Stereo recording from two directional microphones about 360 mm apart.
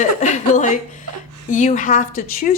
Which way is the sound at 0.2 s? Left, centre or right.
Centre.